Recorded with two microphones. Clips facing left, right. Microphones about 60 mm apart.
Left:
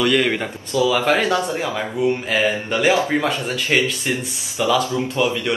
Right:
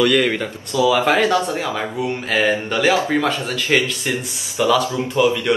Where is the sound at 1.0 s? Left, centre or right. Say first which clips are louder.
Right 2 dB; centre.